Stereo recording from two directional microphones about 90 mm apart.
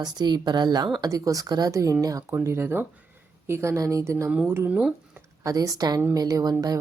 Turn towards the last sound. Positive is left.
turn(degrees=-45)  # may be behind; listen again after turning